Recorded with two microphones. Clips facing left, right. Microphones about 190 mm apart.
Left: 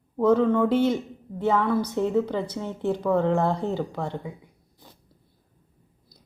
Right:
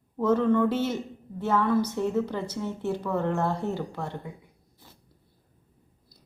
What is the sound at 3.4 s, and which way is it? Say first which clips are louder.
Speech: left 4 dB; 15° left (ahead or behind).